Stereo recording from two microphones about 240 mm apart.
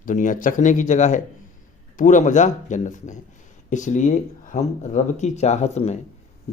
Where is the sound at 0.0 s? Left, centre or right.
Left.